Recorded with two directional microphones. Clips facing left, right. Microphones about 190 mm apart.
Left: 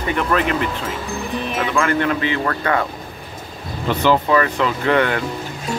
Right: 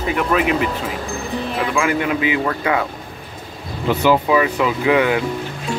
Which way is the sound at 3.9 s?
10° right (ahead or behind).